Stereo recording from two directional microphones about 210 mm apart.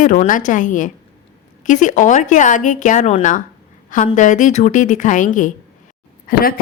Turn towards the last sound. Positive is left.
turn(degrees=45)  # may be behind; listen again after turning